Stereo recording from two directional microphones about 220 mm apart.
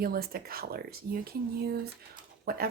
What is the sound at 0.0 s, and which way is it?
Speech, 45° right (ahead or behind).